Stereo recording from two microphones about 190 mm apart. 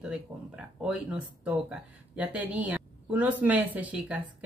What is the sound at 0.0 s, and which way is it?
Speech, 5° right (ahead or behind).